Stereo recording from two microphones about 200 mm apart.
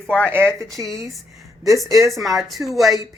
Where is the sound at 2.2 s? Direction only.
Centre (ahead or behind).